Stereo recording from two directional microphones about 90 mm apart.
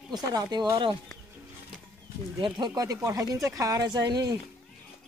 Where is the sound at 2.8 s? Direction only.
40° right (ahead or behind).